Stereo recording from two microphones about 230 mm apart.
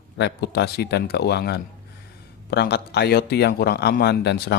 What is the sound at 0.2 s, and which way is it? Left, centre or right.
A man's voice, left.